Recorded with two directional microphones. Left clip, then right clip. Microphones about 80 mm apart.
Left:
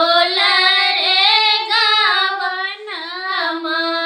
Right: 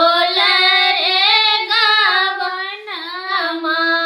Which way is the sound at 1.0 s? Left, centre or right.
Right.